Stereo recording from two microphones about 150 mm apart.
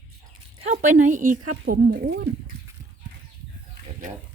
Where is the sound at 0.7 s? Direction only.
55° right (ahead or behind).